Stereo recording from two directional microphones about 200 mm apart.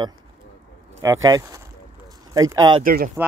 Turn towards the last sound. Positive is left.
turn(degrees=-45)  # may be behind; listen again after turning